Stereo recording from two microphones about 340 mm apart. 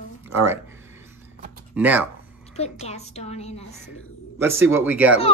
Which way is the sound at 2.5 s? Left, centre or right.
Centre.